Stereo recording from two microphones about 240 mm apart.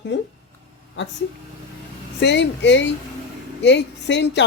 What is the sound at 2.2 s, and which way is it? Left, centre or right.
A woman's voice, left.